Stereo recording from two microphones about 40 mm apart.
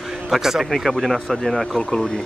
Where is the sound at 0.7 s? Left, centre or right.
Centre.